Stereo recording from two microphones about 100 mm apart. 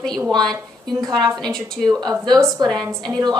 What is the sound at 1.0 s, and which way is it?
Speech, 40° right (ahead or behind).